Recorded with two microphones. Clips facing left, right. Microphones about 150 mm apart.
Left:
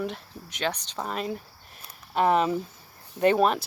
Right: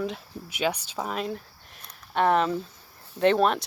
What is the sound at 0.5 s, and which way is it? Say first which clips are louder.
Speech: right 2 dB; 10° right (ahead or behind).